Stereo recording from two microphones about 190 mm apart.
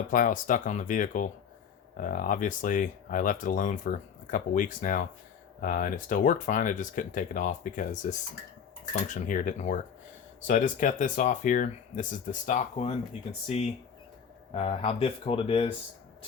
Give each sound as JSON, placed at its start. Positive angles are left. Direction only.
{"t": 0.1, "sound": "speech", "side_deg": 45}
{"t": 9.0, "sound": "speech", "side_deg": 40}
{"t": 14.5, "sound": "speech", "side_deg": 30}